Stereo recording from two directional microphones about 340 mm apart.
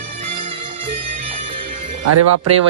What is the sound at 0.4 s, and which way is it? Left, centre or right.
Music, centre.